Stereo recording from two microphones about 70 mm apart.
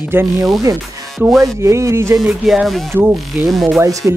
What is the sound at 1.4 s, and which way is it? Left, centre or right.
Speech, right.